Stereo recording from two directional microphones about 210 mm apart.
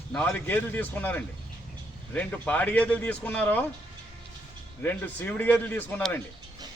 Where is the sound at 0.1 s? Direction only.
5° left (ahead or behind).